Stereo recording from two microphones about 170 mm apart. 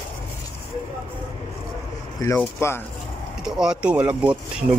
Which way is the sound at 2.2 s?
15° left (ahead or behind).